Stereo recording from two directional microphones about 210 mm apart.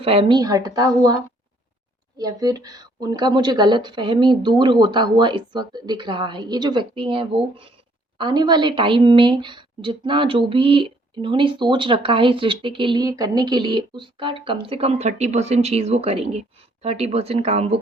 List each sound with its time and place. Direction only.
0.0 s a woman's voice: 25° right (ahead or behind)